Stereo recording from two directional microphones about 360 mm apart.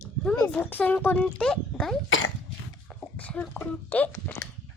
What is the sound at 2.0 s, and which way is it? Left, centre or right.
Speech, left.